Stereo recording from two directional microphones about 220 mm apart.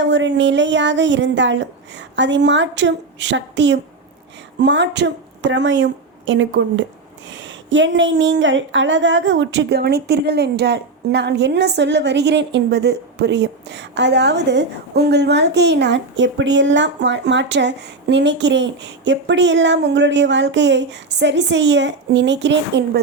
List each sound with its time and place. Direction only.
0.0 s a woman's voice: 55° right (ahead or behind)